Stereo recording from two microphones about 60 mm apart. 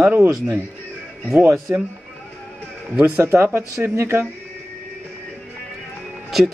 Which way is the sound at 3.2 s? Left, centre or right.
Right.